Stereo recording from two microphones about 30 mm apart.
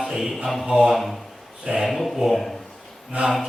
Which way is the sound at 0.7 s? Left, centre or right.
Centre.